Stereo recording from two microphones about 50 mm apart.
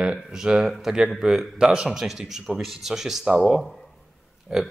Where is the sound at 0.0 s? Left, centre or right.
Centre.